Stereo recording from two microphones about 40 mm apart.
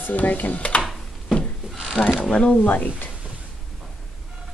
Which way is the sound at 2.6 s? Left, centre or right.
Left.